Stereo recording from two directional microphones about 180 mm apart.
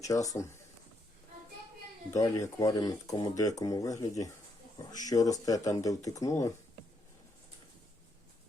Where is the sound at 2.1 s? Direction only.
20° left (ahead or behind).